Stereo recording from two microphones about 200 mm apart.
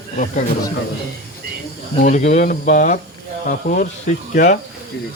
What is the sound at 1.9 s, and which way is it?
Speech, 35° left (ahead or behind).